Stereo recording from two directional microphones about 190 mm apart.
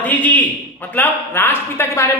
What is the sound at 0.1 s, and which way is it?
A man's voice, 10° left (ahead or behind).